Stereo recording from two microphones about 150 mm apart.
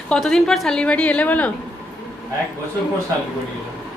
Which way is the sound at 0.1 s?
5° left (ahead or behind).